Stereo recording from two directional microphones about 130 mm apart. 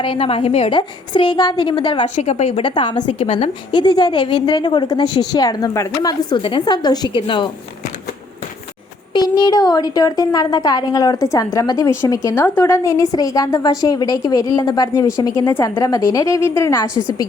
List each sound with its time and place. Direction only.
0.0 s a woman's voice: 45° left (ahead or behind)
0.8 s a woman's voice: 40° left (ahead or behind)
2.1 s a woman's voice: 60° left (ahead or behind)
2.6 s a woman's voice: 35° left (ahead or behind)
9.1 s a woman's voice: 35° left (ahead or behind)